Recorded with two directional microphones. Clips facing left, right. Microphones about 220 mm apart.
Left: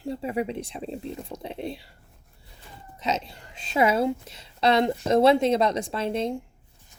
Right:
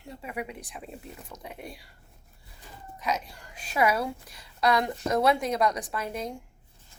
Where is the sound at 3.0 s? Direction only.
25° left (ahead or behind).